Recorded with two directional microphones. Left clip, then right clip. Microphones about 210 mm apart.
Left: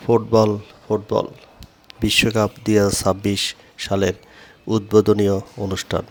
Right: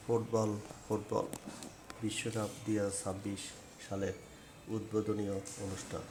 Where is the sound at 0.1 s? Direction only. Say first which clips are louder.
Left 18 dB; 35° left (ahead or behind).